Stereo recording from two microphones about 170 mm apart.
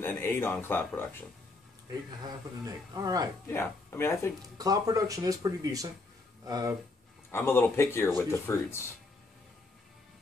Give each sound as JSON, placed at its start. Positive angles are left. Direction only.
{"t": 0.0, "sound": "speech", "side_deg": 15}
{"t": 2.2, "sound": "speech", "side_deg": -20}
{"t": 3.4, "sound": "speech", "side_deg": 15}
{"t": 4.4, "sound": "speech", "side_deg": -20}
{"t": 7.2, "sound": "speech", "side_deg": 15}